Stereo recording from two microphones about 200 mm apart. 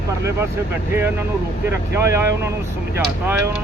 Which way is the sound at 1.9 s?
15° right (ahead or behind).